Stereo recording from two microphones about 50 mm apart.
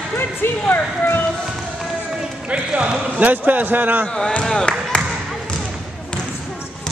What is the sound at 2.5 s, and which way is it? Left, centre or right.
Clip-clop, right.